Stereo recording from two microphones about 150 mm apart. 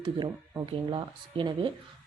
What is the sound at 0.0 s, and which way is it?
A woman's voice, 30° right (ahead or behind).